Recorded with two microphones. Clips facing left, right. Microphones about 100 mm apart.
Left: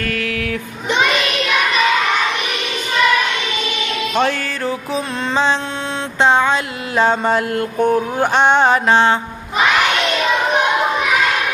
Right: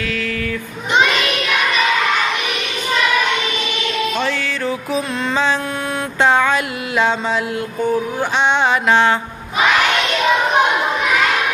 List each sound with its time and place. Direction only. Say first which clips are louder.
4.2 s music: left 3 dB; 55° left (ahead or behind)
4.6 s music: even; 30° left (ahead or behind)
6.2 s a sound: left 1 dB; 25° left (ahead or behind)
7.0 s mantra: left 3 dB; 45° left (ahead or behind)
8.2 s music: left 4 dB; 50° left (ahead or behind); by 9.1 s 35° left (ahead or behind)